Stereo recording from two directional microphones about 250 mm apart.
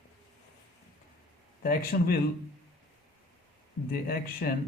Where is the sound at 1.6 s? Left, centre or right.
Left.